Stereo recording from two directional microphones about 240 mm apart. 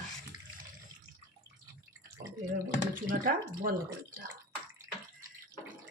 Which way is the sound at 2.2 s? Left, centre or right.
Right.